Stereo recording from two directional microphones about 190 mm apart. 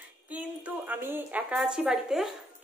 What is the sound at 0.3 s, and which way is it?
A woman's voice, 10° right (ahead or behind).